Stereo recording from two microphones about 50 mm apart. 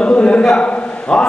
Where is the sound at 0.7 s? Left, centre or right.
Left.